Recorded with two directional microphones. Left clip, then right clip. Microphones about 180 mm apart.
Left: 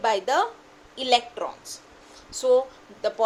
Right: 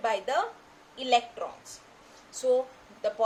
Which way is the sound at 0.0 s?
45° left (ahead or behind).